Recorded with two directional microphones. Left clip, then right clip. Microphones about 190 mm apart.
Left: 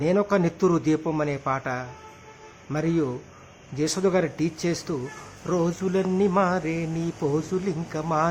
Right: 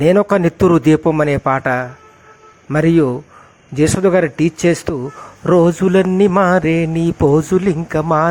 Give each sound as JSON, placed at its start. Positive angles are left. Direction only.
{"t": 0.0, "sound": "mantra", "side_deg": -35}